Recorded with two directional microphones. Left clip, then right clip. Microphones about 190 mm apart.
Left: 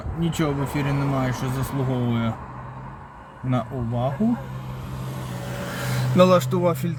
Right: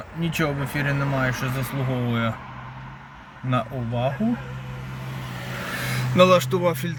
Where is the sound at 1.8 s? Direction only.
35° left (ahead or behind).